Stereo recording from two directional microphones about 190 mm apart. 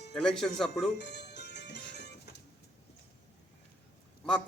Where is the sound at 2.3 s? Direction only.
55° left (ahead or behind).